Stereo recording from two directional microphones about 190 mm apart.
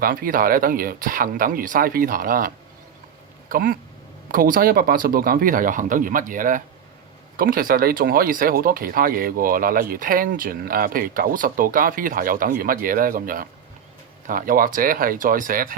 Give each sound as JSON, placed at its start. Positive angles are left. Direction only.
{"t": 0.0, "sound": "speech", "side_deg": -50}
{"t": 3.5, "sound": "speech", "side_deg": -50}